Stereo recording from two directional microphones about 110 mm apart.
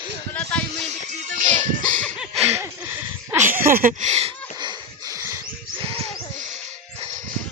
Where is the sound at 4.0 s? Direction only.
80° right.